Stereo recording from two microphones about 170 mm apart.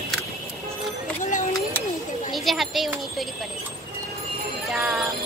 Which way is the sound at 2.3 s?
Centre (ahead or behind).